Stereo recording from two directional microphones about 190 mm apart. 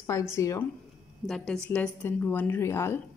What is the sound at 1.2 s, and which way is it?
A woman's voice, centre (ahead or behind).